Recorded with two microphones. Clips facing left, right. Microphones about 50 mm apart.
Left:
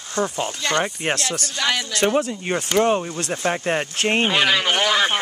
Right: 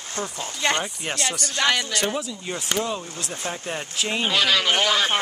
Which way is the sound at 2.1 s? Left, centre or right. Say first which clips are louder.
Left 8 dB; left.